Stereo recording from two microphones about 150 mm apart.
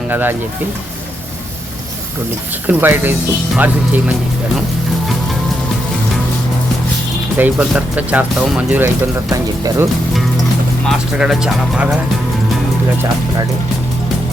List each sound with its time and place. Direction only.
0.1 s speech: 15° right (ahead or behind)
2.6 s speech: 10° right (ahead or behind)
7.3 s speech: 10° right (ahead or behind)
9.3 s speech: 20° right (ahead or behind)
10.8 s speech: 5° right (ahead or behind)